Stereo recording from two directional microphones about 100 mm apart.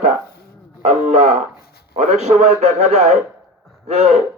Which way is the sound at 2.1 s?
90° right.